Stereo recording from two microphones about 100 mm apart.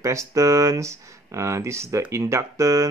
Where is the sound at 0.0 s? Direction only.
30° right (ahead or behind).